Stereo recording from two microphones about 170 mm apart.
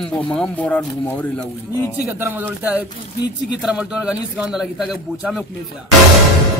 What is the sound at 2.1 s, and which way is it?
Speech, 10° right (ahead or behind).